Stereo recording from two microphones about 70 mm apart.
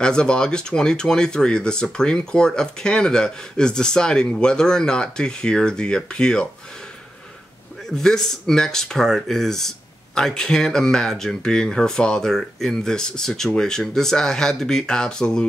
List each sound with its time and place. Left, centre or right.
0.0 s speech: centre
7.9 s speech: centre